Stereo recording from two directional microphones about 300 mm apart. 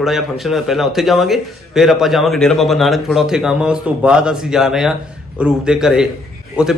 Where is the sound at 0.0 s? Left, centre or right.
Centre.